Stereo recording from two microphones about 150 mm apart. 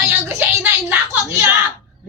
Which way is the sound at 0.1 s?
15° right (ahead or behind).